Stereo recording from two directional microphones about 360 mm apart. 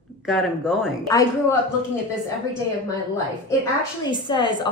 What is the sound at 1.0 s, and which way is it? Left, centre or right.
Speech, centre.